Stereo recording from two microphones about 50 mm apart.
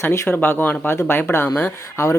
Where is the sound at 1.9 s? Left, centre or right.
Left.